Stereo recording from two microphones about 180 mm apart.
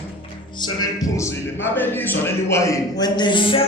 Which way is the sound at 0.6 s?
25° left (ahead or behind).